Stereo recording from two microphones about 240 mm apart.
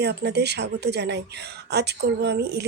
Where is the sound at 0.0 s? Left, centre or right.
Right.